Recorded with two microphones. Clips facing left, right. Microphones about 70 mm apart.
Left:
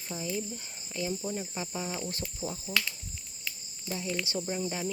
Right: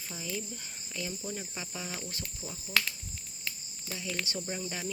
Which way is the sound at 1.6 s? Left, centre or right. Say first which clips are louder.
Left 5 dB; left.